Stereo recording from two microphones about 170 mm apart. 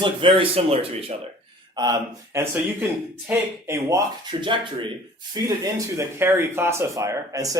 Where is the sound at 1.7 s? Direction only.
25° right (ahead or behind).